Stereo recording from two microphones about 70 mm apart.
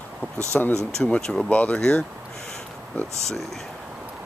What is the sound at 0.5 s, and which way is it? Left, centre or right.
Speech, centre.